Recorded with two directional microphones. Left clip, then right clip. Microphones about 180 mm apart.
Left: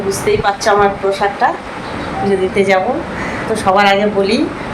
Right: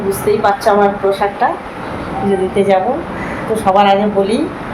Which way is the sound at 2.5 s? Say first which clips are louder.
Right 2 dB; centre (ahead or behind).